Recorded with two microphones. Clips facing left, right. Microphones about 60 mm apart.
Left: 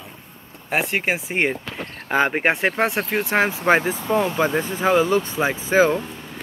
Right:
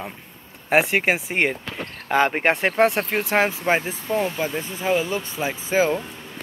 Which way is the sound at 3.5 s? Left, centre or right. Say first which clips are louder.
Left 4 dB; left.